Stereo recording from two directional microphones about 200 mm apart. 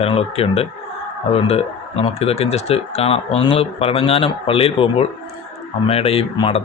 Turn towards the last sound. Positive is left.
turn(degrees=25)  # may be behind; listen again after turning